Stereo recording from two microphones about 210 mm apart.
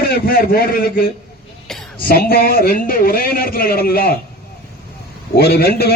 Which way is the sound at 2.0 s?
45° left (ahead or behind).